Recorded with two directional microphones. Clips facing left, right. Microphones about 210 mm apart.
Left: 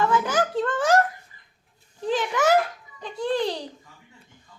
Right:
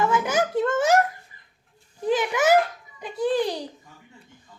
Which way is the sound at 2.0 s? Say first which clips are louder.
Right 1 dB; 10° right (ahead or behind).